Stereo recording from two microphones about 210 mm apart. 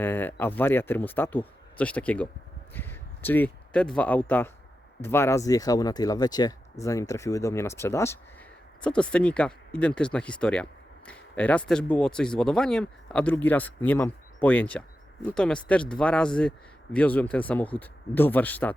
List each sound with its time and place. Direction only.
0.0 s speech: 10° left (ahead or behind)